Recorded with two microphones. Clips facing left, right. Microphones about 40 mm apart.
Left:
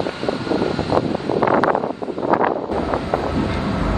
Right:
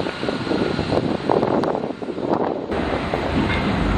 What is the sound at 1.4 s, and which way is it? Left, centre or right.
Wind noise, left.